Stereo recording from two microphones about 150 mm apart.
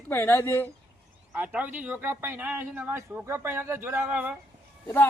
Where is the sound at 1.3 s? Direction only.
10° right (ahead or behind).